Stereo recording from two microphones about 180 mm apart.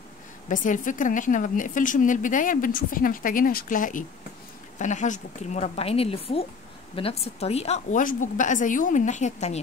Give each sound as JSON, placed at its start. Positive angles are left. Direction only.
{"t": 0.5, "sound": "a woman's voice", "side_deg": 45}